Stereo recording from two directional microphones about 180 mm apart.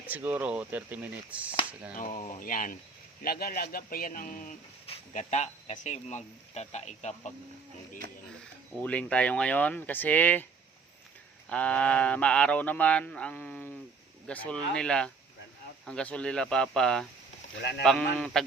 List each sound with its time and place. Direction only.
0.1 s speech: 10° right (ahead or behind)
2.0 s speech: 50° left (ahead or behind)
8.8 s speech: 5° left (ahead or behind)
11.4 s speech: 5° left (ahead or behind)
17.6 s speech: 70° left (ahead or behind)
17.8 s speech: 5° left (ahead or behind)